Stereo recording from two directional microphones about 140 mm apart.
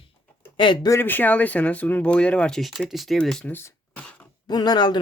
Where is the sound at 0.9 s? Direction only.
15° left (ahead or behind).